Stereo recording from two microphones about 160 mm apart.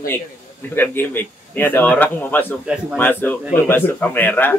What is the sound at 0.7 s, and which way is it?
A man's voice, 10° left (ahead or behind).